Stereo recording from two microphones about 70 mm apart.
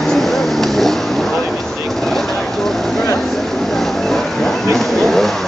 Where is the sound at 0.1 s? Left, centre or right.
Centre.